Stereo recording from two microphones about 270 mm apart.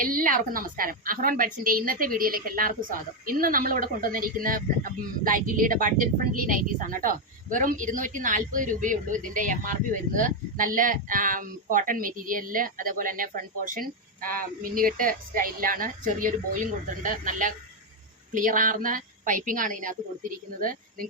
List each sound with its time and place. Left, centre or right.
0.0 s a woman's voice: right